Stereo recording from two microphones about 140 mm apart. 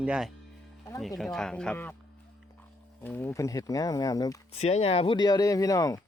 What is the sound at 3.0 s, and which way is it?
Speech, 20° left (ahead or behind).